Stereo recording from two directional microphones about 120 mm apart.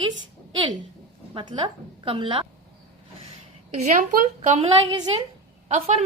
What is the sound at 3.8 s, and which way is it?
Speech, 90° right.